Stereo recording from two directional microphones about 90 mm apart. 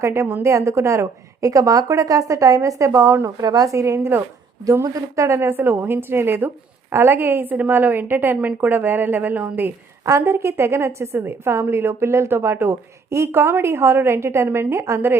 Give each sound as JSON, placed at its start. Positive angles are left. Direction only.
{"t": 0.0, "sound": "a woman's voice", "side_deg": -30}
{"t": 3.4, "sound": "a woman's voice", "side_deg": -45}
{"t": 10.1, "sound": "a woman's voice", "side_deg": -30}